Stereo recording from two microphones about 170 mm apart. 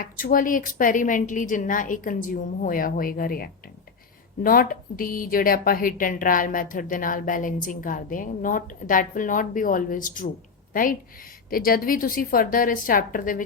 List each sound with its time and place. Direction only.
0.0 s a woman's voice: 55° left (ahead or behind)
11.5 s a woman's voice: 60° left (ahead or behind)